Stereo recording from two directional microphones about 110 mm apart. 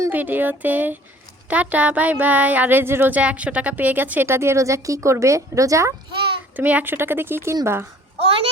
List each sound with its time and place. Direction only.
0.1 s speech: 15° right (ahead or behind)
6.6 s speech: 15° right (ahead or behind)
8.2 s a child's voice: 60° right (ahead or behind)